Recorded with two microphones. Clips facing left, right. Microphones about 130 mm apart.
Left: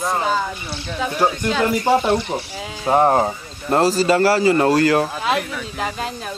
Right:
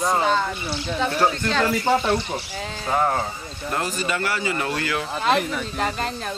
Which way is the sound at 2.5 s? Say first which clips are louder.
Left 2 dB; 5° left (ahead or behind).